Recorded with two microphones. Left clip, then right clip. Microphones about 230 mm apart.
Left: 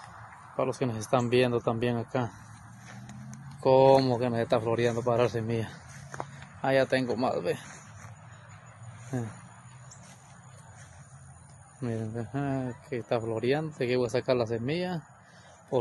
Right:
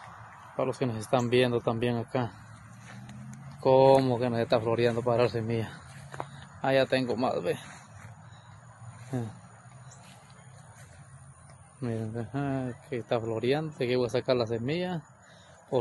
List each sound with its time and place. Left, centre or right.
0.6 s speech: centre
9.1 s speech: centre
11.8 s speech: centre